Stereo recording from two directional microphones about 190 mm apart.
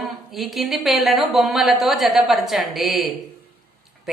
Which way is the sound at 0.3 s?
Centre (ahead or behind).